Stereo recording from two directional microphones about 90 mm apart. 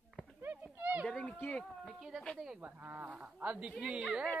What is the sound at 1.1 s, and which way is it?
Speech, 10° left (ahead or behind).